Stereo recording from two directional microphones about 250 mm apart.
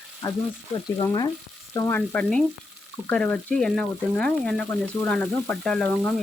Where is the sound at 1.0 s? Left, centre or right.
Centre.